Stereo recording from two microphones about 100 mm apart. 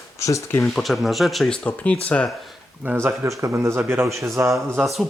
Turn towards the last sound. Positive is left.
turn(degrees=0)  # may be behind; listen again after turning